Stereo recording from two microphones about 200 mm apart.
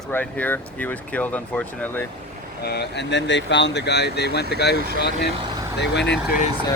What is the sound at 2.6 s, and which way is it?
Speech, 55° left (ahead or behind).